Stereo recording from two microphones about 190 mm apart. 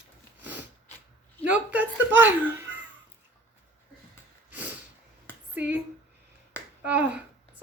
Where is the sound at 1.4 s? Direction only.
10° right (ahead or behind).